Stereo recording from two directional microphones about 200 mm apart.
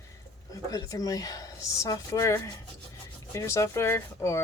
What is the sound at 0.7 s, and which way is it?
Speech, 15° left (ahead or behind).